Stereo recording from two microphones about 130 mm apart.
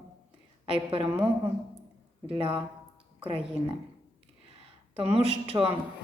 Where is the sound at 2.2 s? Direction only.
40° right (ahead or behind).